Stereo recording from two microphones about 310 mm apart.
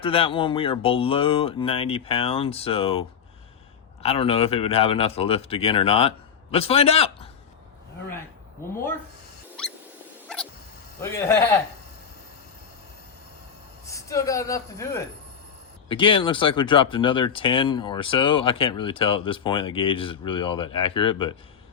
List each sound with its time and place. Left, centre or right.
0.0 s speech: centre
4.0 s speech: centre
9.6 s rodents: centre
11.0 s speech: centre
13.8 s a woman's voice: centre